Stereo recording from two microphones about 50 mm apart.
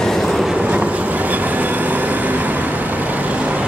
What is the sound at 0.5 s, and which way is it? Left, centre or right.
Train, right.